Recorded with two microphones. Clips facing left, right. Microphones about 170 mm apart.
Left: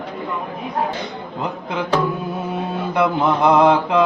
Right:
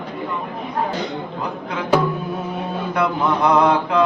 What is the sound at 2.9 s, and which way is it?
Mantra, 20° left (ahead or behind).